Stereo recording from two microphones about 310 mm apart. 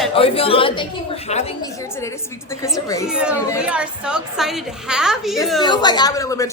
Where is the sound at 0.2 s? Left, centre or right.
Centre.